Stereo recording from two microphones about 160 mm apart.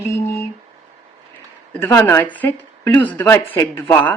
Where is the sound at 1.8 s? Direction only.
15° left (ahead or behind).